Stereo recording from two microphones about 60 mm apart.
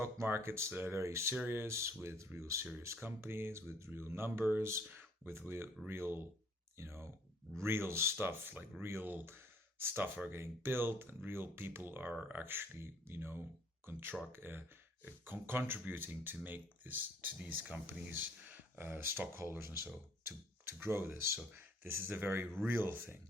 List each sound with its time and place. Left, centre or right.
0.0 s speech: right
0.7 s speech: right
0.9 s speech: right
1.5 s speech: right
4.9 s a sound: right
5.5 s speech: right